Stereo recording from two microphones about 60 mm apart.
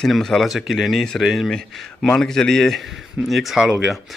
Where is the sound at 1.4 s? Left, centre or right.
Centre.